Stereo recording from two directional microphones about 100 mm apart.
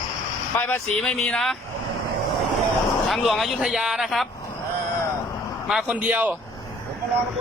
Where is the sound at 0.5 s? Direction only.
25° left (ahead or behind).